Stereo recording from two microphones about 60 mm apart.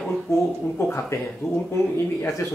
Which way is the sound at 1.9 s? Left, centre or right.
Left.